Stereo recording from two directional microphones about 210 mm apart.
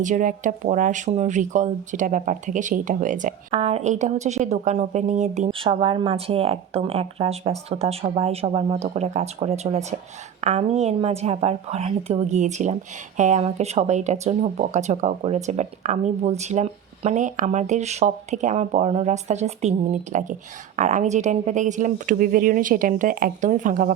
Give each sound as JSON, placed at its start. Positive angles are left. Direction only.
{"t": 0.0, "sound": "speech", "side_deg": -40}
{"t": 3.5, "sound": "a woman's voice", "side_deg": -30}